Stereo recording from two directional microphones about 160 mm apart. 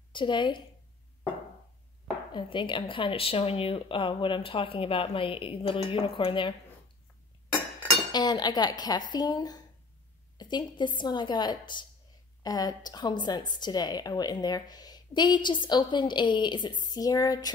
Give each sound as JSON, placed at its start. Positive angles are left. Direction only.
{"t": 0.1, "sound": "a woman's voice", "side_deg": 30}
{"t": 2.3, "sound": "speech", "side_deg": 30}
{"t": 8.1, "sound": "a woman's voice", "side_deg": 25}